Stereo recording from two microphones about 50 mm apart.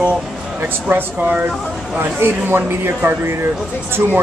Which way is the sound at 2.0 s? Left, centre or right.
Right.